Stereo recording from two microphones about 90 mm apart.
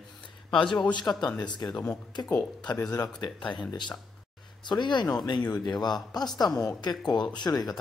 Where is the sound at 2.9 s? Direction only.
45° left (ahead or behind).